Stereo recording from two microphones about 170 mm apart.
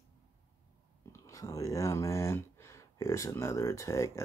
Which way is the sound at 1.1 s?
20° left (ahead or behind).